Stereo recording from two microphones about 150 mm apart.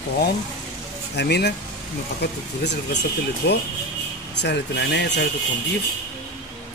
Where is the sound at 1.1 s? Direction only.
90° left.